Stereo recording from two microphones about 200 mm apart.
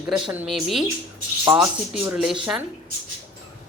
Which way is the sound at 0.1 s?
5° right (ahead or behind).